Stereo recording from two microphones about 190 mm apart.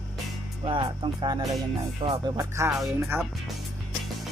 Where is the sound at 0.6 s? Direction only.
25° right (ahead or behind).